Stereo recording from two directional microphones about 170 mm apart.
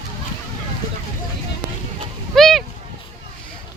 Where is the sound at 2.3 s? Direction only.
Centre (ahead or behind).